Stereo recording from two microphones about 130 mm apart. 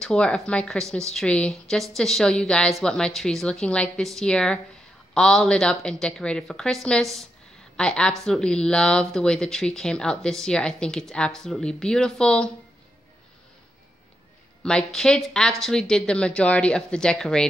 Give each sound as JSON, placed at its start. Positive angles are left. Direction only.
{"t": 0.0, "sound": "speech", "side_deg": 5}
{"t": 14.6, "sound": "a woman's voice", "side_deg": 5}